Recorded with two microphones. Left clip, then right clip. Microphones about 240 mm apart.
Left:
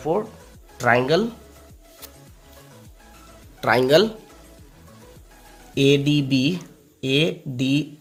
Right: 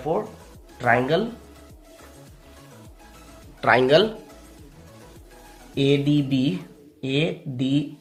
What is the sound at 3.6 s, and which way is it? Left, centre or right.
Speech, left.